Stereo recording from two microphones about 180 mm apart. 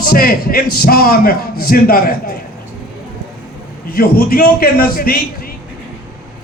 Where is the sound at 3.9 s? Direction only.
55° left (ahead or behind).